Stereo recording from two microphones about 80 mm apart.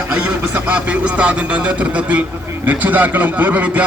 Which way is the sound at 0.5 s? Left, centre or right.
Centre.